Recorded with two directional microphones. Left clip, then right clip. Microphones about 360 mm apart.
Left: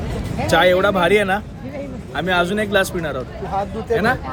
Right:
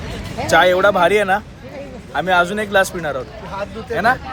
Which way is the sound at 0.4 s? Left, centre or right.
Centre.